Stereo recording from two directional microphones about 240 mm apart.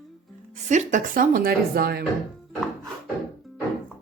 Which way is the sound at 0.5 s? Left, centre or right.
Right.